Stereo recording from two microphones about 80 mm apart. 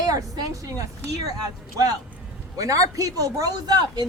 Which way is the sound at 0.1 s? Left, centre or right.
Right.